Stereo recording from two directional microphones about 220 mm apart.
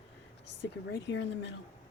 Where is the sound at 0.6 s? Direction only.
55° left (ahead or behind).